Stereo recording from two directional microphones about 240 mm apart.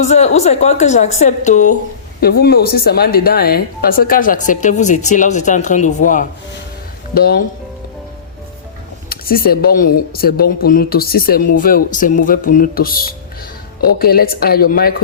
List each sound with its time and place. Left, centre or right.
0.0 s a woman's voice: left
9.0 s speech: left